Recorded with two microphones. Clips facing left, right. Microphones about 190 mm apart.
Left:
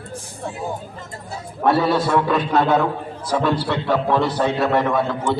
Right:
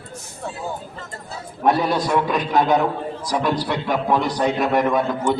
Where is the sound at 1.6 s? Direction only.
15° right (ahead or behind).